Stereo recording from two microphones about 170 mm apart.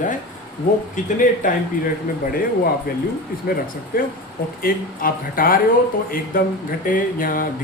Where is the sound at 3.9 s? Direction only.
60° left (ahead or behind).